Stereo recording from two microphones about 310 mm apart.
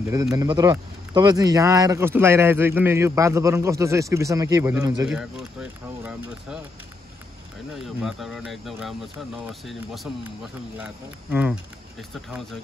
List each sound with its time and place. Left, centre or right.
0.1 s speech: centre
7.7 s speech: centre
10.8 s speech: centre